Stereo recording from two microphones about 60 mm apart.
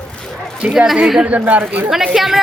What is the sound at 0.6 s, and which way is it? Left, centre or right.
Speech, centre.